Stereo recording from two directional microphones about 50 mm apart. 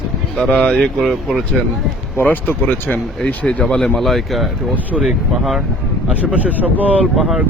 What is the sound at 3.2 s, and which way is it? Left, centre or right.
Speech, left.